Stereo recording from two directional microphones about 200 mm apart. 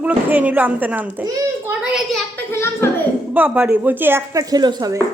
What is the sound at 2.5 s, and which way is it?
Speech, 10° left (ahead or behind).